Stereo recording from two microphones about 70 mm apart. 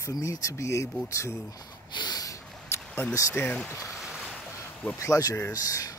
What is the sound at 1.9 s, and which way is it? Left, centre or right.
Snort, left.